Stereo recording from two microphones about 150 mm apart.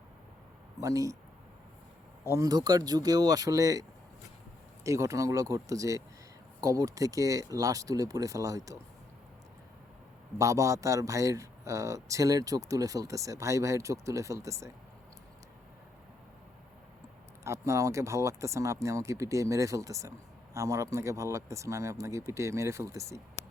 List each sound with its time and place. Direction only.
0.8 s speech: 20° right (ahead or behind)
2.3 s speech: 25° right (ahead or behind)
10.3 s speech: 20° right (ahead or behind)
17.4 s speech: 20° right (ahead or behind)